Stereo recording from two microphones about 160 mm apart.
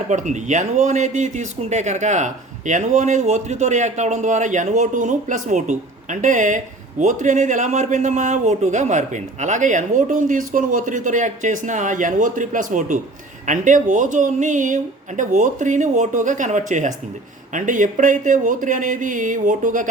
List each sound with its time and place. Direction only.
0.1 s speech: 50° right (ahead or behind)